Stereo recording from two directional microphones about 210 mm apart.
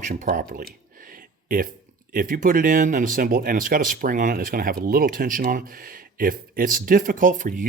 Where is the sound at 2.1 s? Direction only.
40° right (ahead or behind).